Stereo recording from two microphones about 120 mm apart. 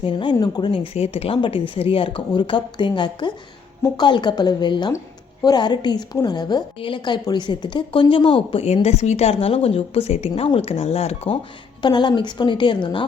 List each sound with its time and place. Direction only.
0.0 s a woman's voice: 40° left (ahead or behind)
0.9 s a woman's voice: 55° left (ahead or behind)
11.8 s a woman's voice: 40° left (ahead or behind)